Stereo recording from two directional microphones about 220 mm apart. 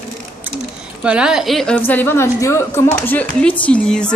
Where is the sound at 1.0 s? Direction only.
5° right (ahead or behind).